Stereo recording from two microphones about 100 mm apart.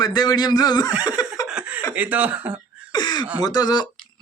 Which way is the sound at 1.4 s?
10° right (ahead or behind).